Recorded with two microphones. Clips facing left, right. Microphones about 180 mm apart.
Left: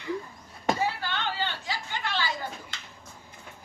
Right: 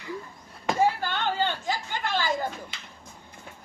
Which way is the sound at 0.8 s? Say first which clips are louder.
Right 5 dB; 50° right (ahead or behind).